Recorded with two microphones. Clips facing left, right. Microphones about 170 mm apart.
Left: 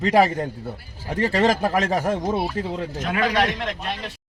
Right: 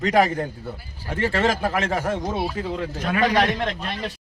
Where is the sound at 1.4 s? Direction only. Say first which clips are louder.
Left 4 dB; 40° left (ahead or behind).